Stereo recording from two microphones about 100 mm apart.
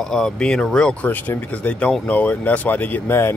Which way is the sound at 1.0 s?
20° left (ahead or behind).